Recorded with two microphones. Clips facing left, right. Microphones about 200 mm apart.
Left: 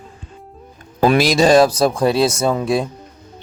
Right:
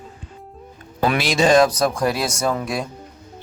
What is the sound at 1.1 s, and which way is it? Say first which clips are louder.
Speech: left 4 dB; 40° left (ahead or behind).